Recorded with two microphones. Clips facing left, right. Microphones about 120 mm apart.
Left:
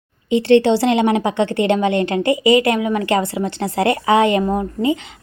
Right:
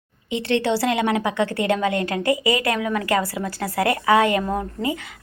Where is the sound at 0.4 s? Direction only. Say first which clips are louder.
Left 7 dB; 30° left (ahead or behind).